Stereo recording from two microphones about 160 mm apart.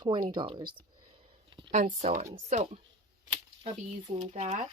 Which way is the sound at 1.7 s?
50° right (ahead or behind).